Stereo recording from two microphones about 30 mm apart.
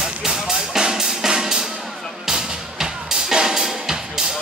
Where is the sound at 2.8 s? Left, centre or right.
Centre.